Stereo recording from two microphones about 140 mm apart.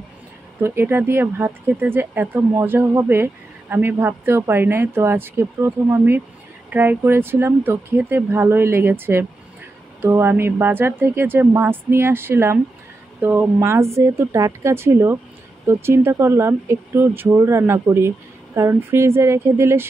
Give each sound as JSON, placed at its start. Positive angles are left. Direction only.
{"t": 0.6, "sound": "speech", "side_deg": -15}